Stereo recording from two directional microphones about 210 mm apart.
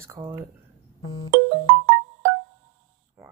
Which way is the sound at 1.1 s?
70° right (ahead or behind).